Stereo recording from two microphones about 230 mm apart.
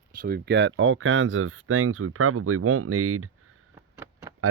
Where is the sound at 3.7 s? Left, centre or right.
Centre.